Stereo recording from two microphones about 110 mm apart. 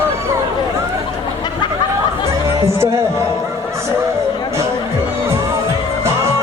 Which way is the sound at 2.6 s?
25° right (ahead or behind).